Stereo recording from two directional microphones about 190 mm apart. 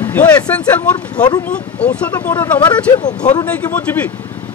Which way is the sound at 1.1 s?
20° left (ahead or behind).